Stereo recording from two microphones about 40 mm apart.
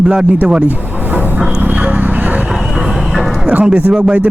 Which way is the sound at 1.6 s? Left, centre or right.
Right.